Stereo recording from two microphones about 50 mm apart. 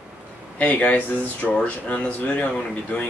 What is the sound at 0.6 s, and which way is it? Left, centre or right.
Speech, left.